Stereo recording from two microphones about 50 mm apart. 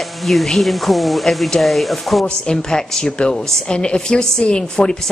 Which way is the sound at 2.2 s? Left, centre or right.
Centre.